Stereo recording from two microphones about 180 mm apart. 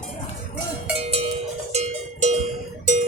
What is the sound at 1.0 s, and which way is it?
Cowbell, 35° right (ahead or behind).